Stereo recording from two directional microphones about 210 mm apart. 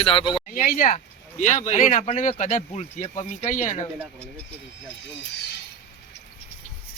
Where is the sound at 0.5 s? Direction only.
40° left (ahead or behind).